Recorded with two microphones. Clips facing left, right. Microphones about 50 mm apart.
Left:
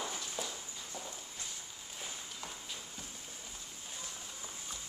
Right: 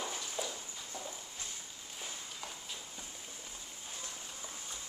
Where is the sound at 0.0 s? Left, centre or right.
Centre.